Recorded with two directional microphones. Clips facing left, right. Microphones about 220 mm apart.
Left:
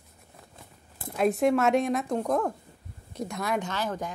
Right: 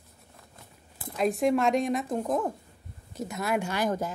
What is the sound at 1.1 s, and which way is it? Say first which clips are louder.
Speech: left 1 dB; centre (ahead or behind).